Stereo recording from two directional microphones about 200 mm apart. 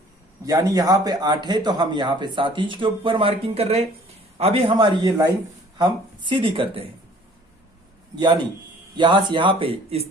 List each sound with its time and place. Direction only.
0.4 s speech: 15° right (ahead or behind)
9.0 s speech: 25° right (ahead or behind)